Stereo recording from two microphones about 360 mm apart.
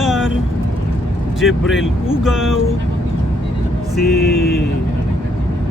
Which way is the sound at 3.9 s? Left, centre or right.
Left.